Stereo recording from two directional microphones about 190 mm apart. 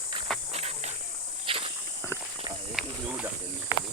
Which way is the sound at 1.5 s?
30° right (ahead or behind).